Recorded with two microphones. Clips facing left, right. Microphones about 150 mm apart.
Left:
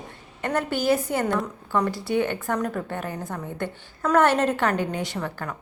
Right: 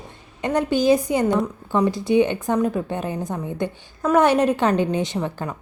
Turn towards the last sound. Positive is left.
turn(degrees=-20)  # may be behind; listen again after turning